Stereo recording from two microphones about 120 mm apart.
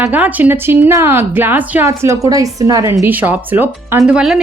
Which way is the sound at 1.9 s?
25° right (ahead or behind).